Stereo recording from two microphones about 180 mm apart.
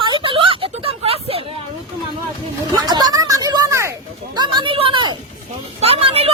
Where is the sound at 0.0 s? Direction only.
25° right (ahead or behind).